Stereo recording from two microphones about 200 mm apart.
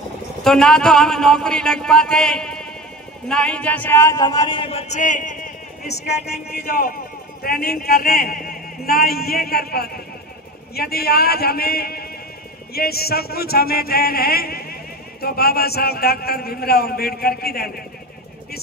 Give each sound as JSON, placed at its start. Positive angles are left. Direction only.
{"t": 0.4, "sound": "a man's voice", "side_deg": 0}
{"t": 5.9, "sound": "speech", "side_deg": 55}